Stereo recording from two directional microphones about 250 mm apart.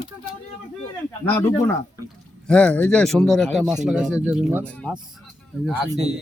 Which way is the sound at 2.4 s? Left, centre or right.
Centre.